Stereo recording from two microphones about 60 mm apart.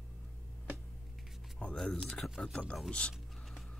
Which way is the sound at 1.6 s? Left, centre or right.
Centre.